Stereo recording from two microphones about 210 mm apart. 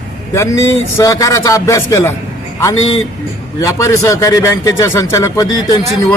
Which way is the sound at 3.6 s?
15° left (ahead or behind).